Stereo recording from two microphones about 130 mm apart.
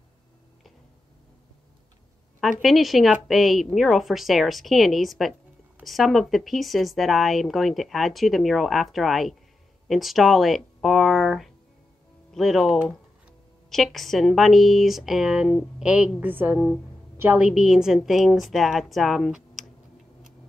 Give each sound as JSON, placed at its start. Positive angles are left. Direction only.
{"t": 2.6, "sound": "a woman's voice", "side_deg": 0}
{"t": 17.5, "sound": "speech", "side_deg": -5}